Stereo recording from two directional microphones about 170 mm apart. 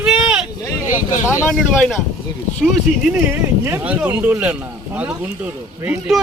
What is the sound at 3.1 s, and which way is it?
Speech, 10° right (ahead or behind).